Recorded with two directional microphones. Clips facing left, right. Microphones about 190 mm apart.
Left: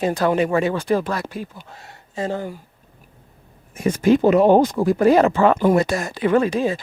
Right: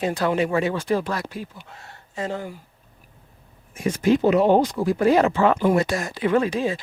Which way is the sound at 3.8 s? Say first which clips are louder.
Left 3 dB; 50° left (ahead or behind).